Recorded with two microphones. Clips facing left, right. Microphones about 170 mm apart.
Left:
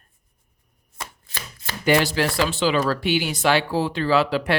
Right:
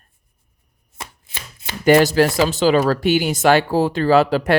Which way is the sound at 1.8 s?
45° right (ahead or behind).